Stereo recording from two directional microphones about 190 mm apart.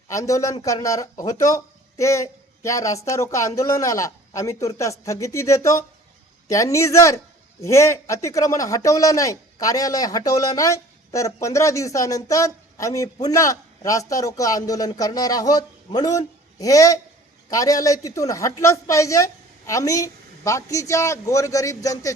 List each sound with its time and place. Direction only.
0.1 s speech: 15° left (ahead or behind)